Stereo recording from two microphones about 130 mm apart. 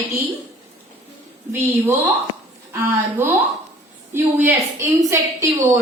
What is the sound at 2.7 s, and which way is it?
A woman's voice, 20° right (ahead or behind).